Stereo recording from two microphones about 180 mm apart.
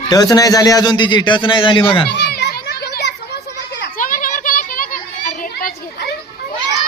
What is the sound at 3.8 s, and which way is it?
Children playing, 50° left (ahead or behind).